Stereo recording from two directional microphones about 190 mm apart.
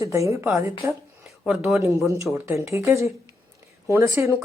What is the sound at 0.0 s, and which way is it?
Speech, 15° right (ahead or behind).